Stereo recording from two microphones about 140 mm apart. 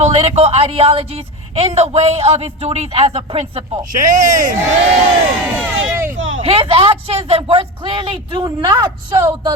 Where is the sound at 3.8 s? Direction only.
70° right (ahead or behind).